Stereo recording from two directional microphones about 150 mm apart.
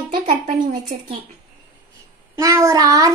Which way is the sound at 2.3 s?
20° right (ahead or behind).